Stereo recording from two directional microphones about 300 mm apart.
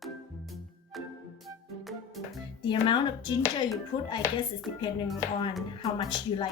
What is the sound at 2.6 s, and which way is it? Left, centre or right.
A woman's voice, centre.